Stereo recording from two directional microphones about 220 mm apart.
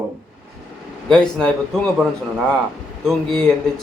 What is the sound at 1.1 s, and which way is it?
Speech, 5° left (ahead or behind).